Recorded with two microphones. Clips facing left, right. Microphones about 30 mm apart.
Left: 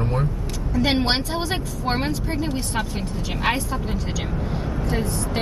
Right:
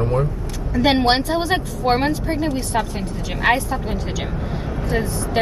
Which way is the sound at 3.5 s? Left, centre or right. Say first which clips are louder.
Right 4 dB; centre.